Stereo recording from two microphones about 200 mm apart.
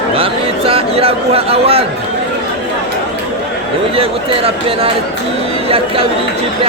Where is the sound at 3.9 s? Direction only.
30° right (ahead or behind).